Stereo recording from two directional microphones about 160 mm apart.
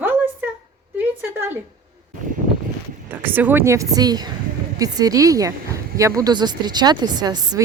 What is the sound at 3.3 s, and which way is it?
A woman's voice, 10° right (ahead or behind).